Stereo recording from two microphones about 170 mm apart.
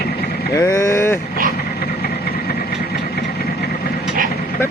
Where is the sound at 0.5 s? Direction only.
15° left (ahead or behind).